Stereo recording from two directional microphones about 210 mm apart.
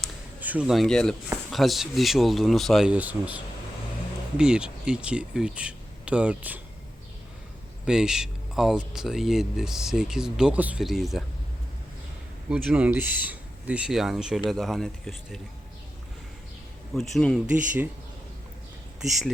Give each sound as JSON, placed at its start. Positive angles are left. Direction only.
{"t": 0.0, "sound": "a sound", "side_deg": -5}
{"t": 1.5, "sound": "speech", "side_deg": 0}
{"t": 7.9, "sound": "speech", "side_deg": -5}
{"t": 12.5, "sound": "speech", "side_deg": -5}
{"t": 16.9, "sound": "speech", "side_deg": 0}
{"t": 17.4, "sound": "speech", "side_deg": -40}